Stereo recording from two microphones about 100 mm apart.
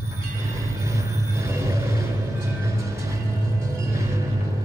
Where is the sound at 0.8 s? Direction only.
30° right (ahead or behind).